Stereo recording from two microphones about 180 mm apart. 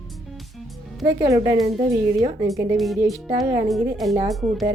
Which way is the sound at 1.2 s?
20° right (ahead or behind).